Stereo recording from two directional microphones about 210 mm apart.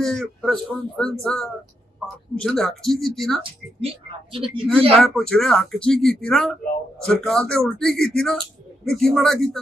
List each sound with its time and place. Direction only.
0.0 s speech: centre (ahead or behind)
3.8 s speech: 25° right (ahead or behind)
4.9 s speech: 5° left (ahead or behind)